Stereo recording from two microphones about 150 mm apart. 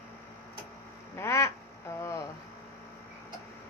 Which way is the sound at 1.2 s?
20° left (ahead or behind).